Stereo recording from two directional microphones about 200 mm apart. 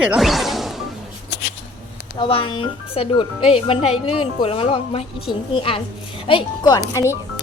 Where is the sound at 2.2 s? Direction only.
25° left (ahead or behind).